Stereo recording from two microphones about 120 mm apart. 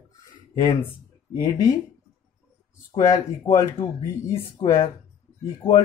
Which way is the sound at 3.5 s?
50° left (ahead or behind).